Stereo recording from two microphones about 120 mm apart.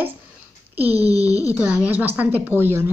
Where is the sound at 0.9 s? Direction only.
60° right (ahead or behind).